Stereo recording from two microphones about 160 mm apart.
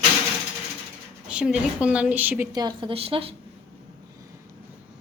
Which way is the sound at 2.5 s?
30° right (ahead or behind).